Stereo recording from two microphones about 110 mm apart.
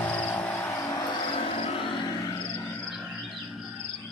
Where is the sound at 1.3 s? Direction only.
55° left (ahead or behind).